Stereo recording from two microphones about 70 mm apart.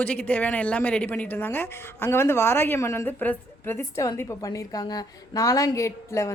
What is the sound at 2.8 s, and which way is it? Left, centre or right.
Speech, left.